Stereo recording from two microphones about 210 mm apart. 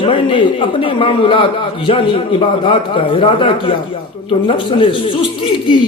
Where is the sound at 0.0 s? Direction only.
25° left (ahead or behind).